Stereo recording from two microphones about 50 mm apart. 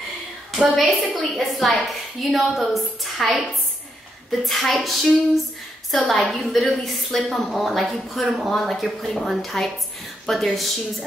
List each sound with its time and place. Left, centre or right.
0.6 s a woman's voice: centre